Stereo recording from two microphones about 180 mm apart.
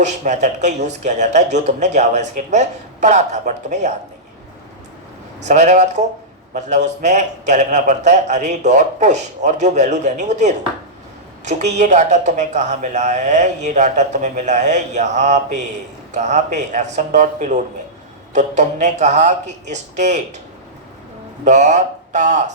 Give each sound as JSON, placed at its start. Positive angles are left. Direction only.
{"t": 0.0, "sound": "speech", "side_deg": -40}
{"t": 5.5, "sound": "speech", "side_deg": -40}
{"t": 21.4, "sound": "speech", "side_deg": -40}